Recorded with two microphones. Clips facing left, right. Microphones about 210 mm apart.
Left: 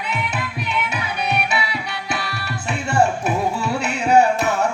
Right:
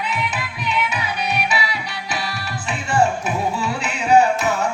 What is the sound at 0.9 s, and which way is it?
Music, 55° left (ahead or behind).